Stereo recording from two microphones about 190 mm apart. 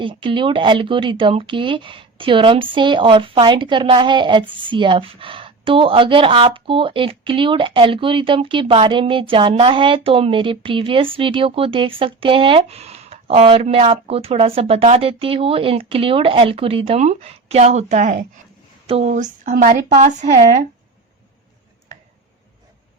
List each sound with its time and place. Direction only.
0.0 s a woman's voice: 25° right (ahead or behind); by 20.4 s 45° right (ahead or behind)